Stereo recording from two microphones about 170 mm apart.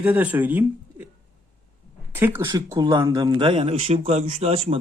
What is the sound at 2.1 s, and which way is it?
Speech, 15° right (ahead or behind).